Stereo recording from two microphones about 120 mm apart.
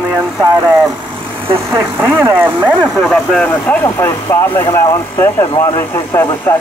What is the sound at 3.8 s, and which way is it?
A man's voice, 20° left (ahead or behind).